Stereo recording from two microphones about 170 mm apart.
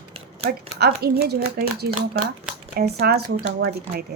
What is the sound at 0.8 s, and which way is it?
A woman's voice, 70° right (ahead or behind).